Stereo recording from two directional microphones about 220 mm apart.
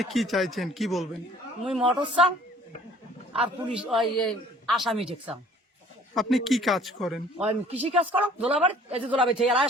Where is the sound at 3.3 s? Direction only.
Centre (ahead or behind).